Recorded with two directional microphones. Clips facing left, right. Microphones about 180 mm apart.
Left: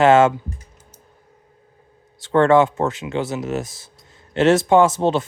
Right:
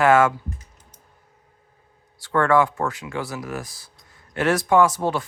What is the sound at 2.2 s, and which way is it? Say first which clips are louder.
Speech: left 5 dB; 20° left (ahead or behind).